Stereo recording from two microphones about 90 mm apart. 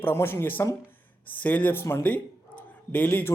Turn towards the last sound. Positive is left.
turn(degrees=25)  # may be behind; listen again after turning